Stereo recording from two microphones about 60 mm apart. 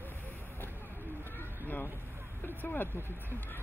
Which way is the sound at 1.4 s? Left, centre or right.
Left.